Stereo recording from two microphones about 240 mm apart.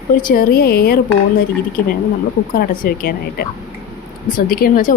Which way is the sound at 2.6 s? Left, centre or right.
Left.